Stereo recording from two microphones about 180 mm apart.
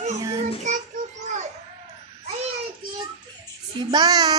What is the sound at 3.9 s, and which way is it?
Speech, 25° right (ahead or behind).